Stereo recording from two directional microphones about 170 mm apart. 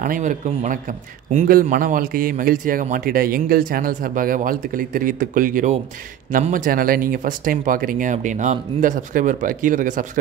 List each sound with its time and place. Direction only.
0.0 s a man's voice: 50° right (ahead or behind)